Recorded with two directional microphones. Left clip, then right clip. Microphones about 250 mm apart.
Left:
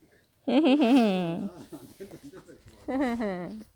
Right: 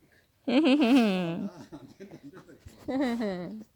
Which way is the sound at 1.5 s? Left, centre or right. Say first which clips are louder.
Left 2 dB; right.